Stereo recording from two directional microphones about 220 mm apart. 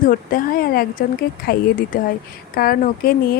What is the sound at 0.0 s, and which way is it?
Speech, 40° left (ahead or behind).